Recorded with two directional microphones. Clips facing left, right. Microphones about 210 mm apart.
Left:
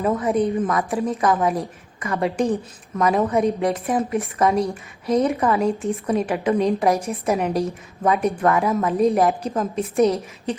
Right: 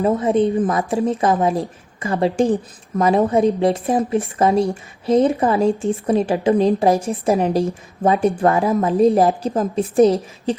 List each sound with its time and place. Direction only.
0.0 s a woman's voice: 30° right (ahead or behind)